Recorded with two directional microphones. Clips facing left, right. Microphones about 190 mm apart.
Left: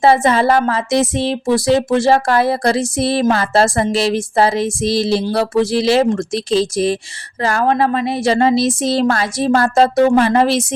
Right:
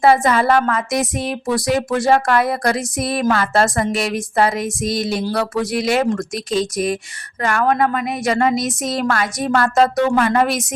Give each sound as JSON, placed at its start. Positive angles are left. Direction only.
{"t": 0.0, "sound": "speech", "side_deg": 25}